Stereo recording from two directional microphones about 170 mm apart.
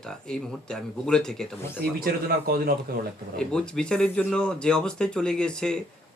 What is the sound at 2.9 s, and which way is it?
Speech, 60° right (ahead or behind).